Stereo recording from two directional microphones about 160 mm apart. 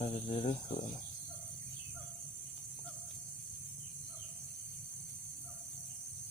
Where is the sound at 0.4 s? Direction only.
55° left (ahead or behind).